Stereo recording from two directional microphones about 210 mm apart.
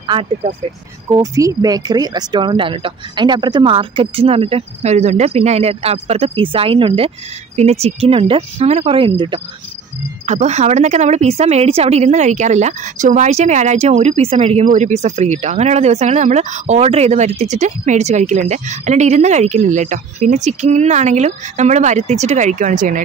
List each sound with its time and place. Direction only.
0.0 s speech: 25° right (ahead or behind)
10.2 s speech: 35° right (ahead or behind)